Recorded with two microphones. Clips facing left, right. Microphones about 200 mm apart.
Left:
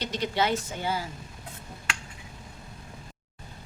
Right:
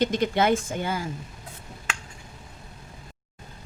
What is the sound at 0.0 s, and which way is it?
A woman's voice, 50° right (ahead or behind).